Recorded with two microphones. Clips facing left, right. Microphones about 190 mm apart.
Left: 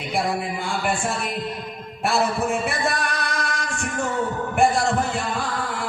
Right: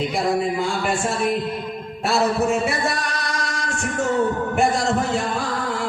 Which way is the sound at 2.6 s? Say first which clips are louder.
Right 1 dB; 55° left (ahead or behind).